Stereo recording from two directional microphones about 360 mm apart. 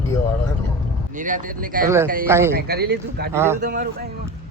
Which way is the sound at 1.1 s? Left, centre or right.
Right.